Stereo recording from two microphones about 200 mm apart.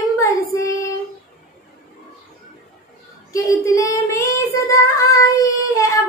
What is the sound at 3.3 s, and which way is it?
Child singing, 15° left (ahead or behind).